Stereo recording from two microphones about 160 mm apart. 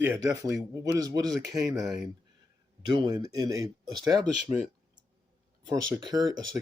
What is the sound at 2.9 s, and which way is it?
Speech, 25° right (ahead or behind).